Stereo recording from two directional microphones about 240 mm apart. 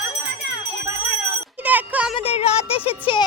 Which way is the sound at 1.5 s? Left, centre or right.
Centre.